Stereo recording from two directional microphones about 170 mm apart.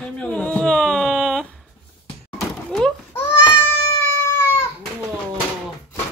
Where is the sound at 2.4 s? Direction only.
5° left (ahead or behind).